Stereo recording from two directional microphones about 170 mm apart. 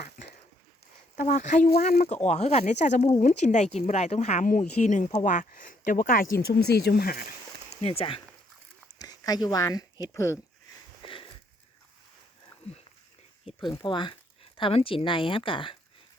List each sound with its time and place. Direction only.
1.1 s speech: 50° left (ahead or behind)
7.8 s speech: 35° left (ahead or behind)
9.0 s speech: 20° left (ahead or behind)
11.0 s a sound: 30° left (ahead or behind)
13.4 s speech: 30° left (ahead or behind)